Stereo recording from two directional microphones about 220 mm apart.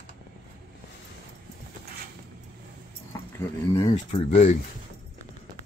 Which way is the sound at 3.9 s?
30° left (ahead or behind).